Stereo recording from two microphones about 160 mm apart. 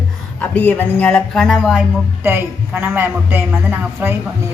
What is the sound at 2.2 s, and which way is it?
A woman's voice, 15° right (ahead or behind).